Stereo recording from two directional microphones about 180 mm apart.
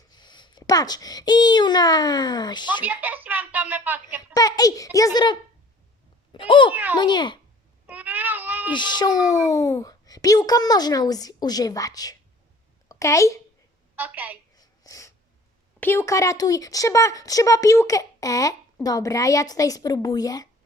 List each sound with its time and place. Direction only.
0.1 s a child's voice: 25° left (ahead or behind)
2.8 s speech: 10° right (ahead or behind)
4.4 s speech: 20° left (ahead or behind)
7.9 s baby cry: 10° right (ahead or behind)
8.7 s speech: 25° left (ahead or behind)
13.9 s a woman's voice: 10° right (ahead or behind)
14.5 s a sound: 20° left (ahead or behind)
15.8 s speech: 15° left (ahead or behind)